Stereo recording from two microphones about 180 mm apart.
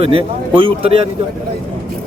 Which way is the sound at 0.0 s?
30° right (ahead or behind).